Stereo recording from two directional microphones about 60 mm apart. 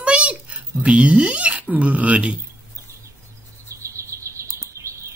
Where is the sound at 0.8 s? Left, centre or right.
Right.